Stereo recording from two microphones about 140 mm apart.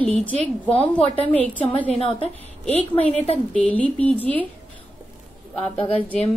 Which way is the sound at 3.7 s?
10° left (ahead or behind).